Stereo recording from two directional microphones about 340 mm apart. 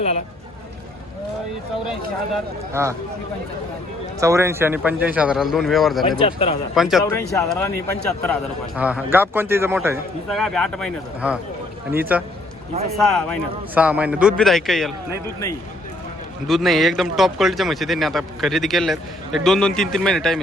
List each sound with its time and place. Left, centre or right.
1.9 s a man's voice: centre
4.2 s a man's voice: centre
6.2 s speech: centre
6.7 s a man's voice: centre
16.5 s a man's voice: centre